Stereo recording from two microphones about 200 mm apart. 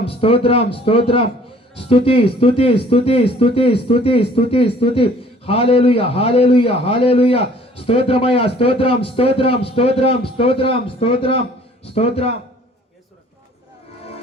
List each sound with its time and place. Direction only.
0.1 s a man's voice: 30° left (ahead or behind)